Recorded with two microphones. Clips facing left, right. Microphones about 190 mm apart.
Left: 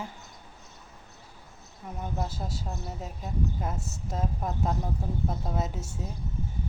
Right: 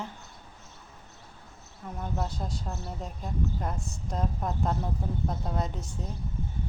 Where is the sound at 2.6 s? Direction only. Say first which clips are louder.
Even; 15° left (ahead or behind).